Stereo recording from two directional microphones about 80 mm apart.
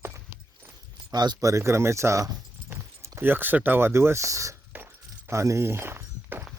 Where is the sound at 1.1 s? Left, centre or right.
Right.